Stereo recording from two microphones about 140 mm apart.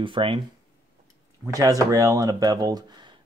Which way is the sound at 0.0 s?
40° right (ahead or behind).